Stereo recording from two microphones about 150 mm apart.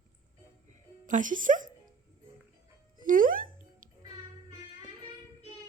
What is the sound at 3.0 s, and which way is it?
Music, 65° right (ahead or behind).